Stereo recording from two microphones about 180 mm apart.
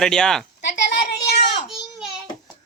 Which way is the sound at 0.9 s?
70° left (ahead or behind).